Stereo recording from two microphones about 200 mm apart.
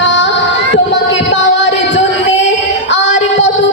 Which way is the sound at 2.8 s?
65° left (ahead or behind).